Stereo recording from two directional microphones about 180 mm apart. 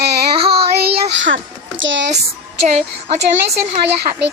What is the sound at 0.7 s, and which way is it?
Speech, 75° right (ahead or behind).